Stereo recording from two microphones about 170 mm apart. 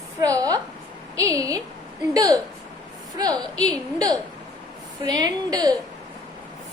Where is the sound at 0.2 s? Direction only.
20° right (ahead or behind).